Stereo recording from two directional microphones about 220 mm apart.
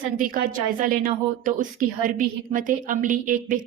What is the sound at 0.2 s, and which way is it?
A woman's voice, 40° right (ahead or behind).